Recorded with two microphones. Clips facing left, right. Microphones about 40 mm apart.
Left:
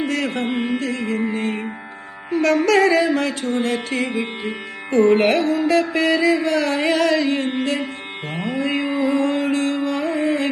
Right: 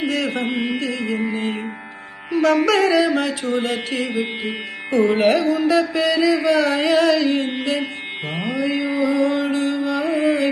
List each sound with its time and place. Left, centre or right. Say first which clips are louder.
0.3 s music: even; right
2.7 s mantra: left 1 dB; left
3.4 s music: even; right
5.2 s mantra: right 1 dB; left
6.4 s music: right 2 dB; right
6.8 s music: right 1 dB; left
7.3 s music: even; right
8.5 s music: even; left
10.0 s music: right 4 dB; right